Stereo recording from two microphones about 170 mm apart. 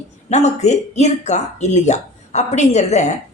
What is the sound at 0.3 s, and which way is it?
A woman's voice, 40° left (ahead or behind).